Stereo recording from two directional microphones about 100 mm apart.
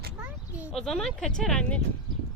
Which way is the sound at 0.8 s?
5° left (ahead or behind).